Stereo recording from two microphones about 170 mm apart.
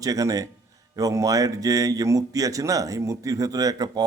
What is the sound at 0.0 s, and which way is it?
Speech, 20° right (ahead or behind).